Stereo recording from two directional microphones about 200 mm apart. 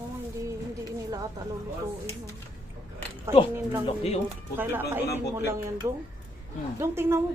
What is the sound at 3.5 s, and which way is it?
Speech, 10° right (ahead or behind).